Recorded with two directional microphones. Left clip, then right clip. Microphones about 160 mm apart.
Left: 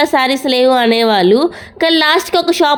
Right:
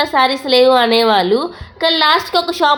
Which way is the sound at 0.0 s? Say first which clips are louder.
Left 1 dB; 50° left (ahead or behind).